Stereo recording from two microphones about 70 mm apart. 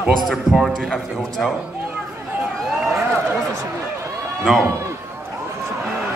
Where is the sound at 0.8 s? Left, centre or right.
Centre.